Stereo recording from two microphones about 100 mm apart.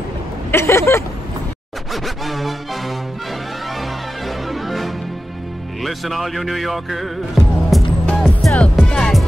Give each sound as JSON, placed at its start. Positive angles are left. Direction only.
{"t": 0.5, "sound": "a sound", "side_deg": 25}
{"t": 2.0, "sound": "music", "side_deg": 0}
{"t": 4.3, "sound": "music", "side_deg": 0}